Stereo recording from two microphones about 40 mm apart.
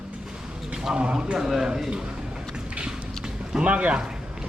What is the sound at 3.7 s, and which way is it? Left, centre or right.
Speech, right.